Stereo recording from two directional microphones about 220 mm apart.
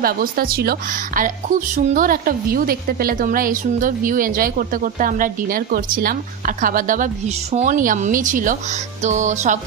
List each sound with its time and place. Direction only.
0.0 s a woman's voice: 40° right (ahead or behind)